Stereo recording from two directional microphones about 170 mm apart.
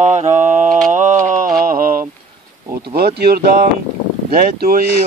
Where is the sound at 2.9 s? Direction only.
65° right (ahead or behind).